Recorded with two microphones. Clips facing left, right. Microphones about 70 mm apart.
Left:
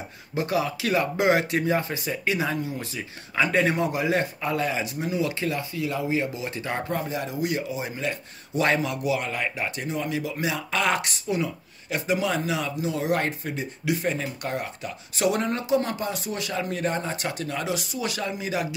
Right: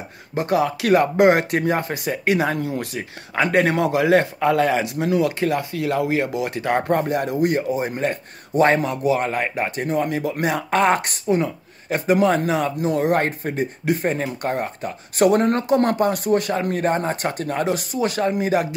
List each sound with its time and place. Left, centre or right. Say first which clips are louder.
0.3 s speech: right 6 dB; right
3.7 s speech: right 7 dB; right
5.4 s speech: right 6 dB; right